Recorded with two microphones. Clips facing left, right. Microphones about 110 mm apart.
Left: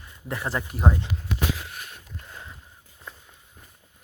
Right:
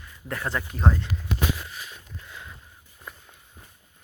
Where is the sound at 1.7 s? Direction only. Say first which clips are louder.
Even; 55° left (ahead or behind).